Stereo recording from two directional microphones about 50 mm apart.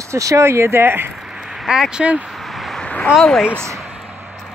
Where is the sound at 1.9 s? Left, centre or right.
Right.